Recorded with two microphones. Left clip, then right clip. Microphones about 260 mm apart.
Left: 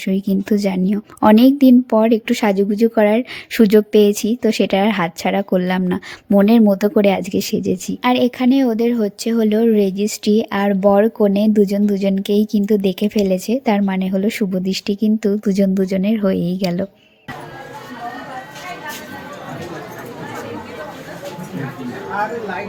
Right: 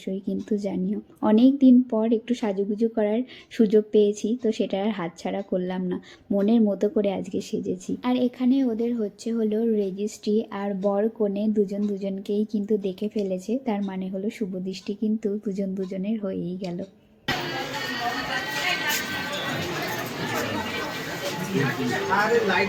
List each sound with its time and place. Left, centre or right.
0.0 s a woman's voice: left